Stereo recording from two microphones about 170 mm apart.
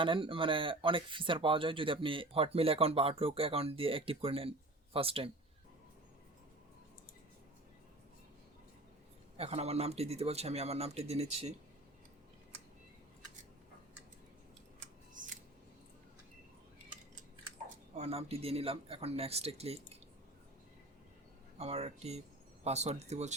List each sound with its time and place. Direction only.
0.0 s speech: 30° right (ahead or behind)
9.4 s speech: 35° right (ahead or behind)
14.8 s scissors: 50° right (ahead or behind)
17.9 s speech: 35° right (ahead or behind)
21.6 s speech: 40° right (ahead or behind)